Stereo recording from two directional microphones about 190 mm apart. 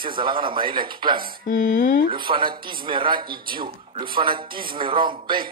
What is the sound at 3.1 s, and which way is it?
Speech, 50° right (ahead or behind).